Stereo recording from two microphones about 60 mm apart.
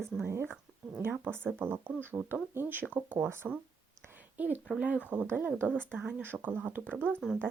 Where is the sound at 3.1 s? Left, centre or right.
Right.